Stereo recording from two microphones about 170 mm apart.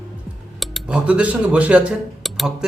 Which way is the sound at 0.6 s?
Centre (ahead or behind).